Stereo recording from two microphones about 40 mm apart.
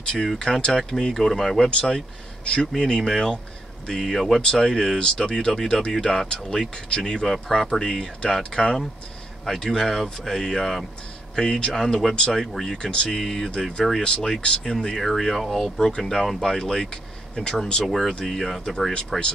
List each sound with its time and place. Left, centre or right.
0.4 s speech: centre
1.7 s speech: left
4.1 s speech: centre
4.4 s speech: centre
9.7 s speech: centre
11.3 s speech: left
12.9 s speech: left
13.2 s speech: centre
15.0 s speech: centre
17.8 s speech: centre
18.9 s speech: left